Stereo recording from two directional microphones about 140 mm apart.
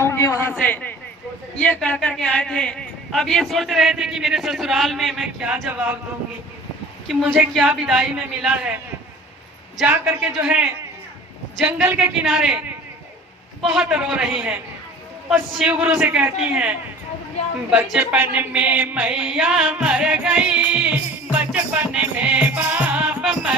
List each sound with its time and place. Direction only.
0.0 s a sound: 20° left (ahead or behind)
0.5 s a man's voice: 10° left (ahead or behind); by 6.0 s 10° right (ahead or behind)
7.1 s a man's voice: centre (ahead or behind)
9.7 s music: 10° right (ahead or behind)
11.5 s a man's voice: 10° right (ahead or behind)
16.0 s music: 15° right (ahead or behind)
16.4 s a man's voice: 5° right (ahead or behind)
17.7 s music: 5° right (ahead or behind)